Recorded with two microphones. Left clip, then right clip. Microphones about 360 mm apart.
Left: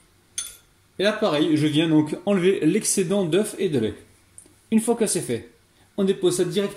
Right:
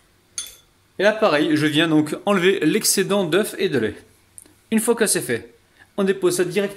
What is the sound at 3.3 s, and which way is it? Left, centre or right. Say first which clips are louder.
Speech: right 3 dB; right.